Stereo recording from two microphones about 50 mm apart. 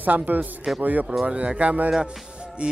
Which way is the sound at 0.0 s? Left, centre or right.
Right.